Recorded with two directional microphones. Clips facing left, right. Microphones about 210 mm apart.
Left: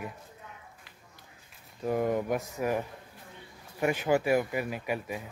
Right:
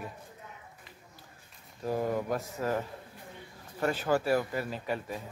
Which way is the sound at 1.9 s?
20° left (ahead or behind).